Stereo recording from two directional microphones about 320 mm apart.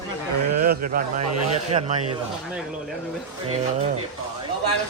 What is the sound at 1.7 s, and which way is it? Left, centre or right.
Speech, centre.